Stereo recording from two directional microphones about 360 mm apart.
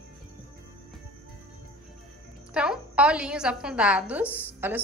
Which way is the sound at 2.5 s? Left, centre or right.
Centre.